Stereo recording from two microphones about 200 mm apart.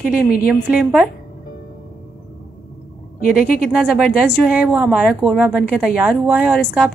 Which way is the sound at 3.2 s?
45° left (ahead or behind).